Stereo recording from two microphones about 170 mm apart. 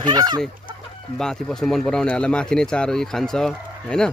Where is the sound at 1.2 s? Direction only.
5° left (ahead or behind).